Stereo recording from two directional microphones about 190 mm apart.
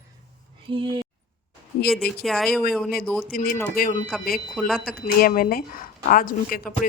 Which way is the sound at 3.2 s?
50° left (ahead or behind).